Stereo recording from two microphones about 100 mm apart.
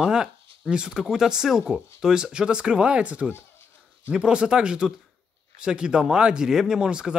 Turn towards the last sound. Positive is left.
turn(degrees=-5)  # may be behind; listen again after turning